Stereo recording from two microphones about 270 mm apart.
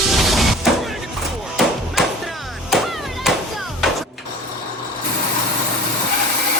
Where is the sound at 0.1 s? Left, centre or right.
Centre.